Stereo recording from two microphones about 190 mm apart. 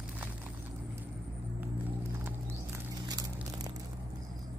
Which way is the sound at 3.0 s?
20° right (ahead or behind).